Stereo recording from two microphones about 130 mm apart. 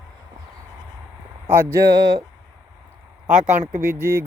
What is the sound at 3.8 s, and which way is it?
Speech, 20° right (ahead or behind).